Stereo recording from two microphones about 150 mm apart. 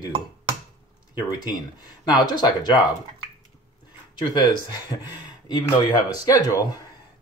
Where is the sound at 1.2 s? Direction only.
25° left (ahead or behind).